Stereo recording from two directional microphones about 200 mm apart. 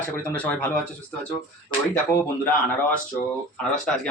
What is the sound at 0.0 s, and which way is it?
Speech, 5° left (ahead or behind).